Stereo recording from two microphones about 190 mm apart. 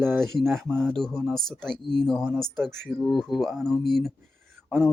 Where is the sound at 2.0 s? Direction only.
Centre (ahead or behind).